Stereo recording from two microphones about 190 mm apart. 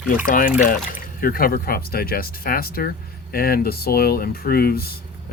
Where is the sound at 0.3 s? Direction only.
45° left (ahead or behind).